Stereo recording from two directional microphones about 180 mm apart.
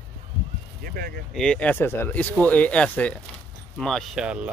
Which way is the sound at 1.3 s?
5° left (ahead or behind).